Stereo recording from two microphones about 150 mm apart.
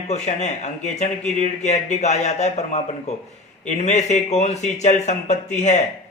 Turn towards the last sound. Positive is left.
turn(degrees=50)  # may be behind; listen again after turning